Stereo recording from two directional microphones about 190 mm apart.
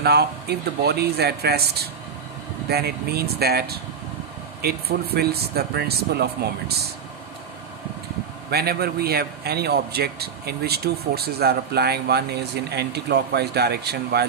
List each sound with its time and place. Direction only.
0.0 s a man's voice: 55° right (ahead or behind)
8.4 s a man's voice: 55° right (ahead or behind)